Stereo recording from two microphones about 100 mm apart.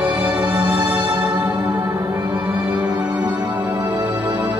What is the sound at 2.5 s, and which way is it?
Music, 15° right (ahead or behind).